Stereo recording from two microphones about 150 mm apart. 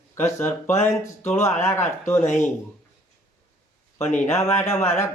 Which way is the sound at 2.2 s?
55° left (ahead or behind).